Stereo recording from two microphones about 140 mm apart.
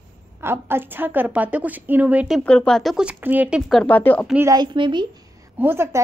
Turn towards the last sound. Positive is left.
turn(degrees=-15)  # may be behind; listen again after turning